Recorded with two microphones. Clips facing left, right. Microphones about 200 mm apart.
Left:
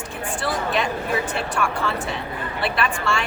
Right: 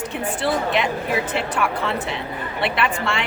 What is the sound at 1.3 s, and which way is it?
A woman's voice, 20° right (ahead or behind).